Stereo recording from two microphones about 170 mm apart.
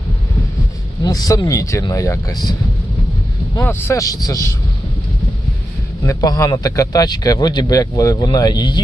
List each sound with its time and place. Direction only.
1.0 s speech: 20° left (ahead or behind)
3.6 s speech: 15° left (ahead or behind)
6.1 s speech: 20° left (ahead or behind)